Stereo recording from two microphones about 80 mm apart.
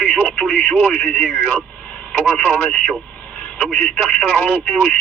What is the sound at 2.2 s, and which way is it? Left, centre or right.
Speech, left.